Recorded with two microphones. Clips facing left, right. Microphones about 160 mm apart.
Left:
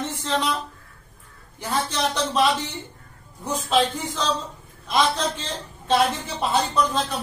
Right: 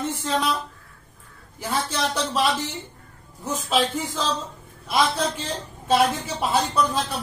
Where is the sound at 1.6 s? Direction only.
5° right (ahead or behind).